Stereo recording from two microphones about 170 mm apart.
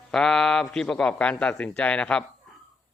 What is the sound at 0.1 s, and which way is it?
Speech, 5° left (ahead or behind).